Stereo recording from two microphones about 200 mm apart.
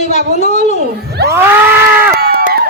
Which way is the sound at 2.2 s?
50° right (ahead or behind).